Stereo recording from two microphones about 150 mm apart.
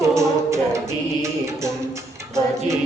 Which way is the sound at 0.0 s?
20° right (ahead or behind).